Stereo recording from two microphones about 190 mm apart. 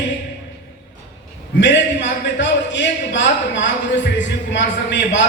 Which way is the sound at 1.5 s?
70° left (ahead or behind).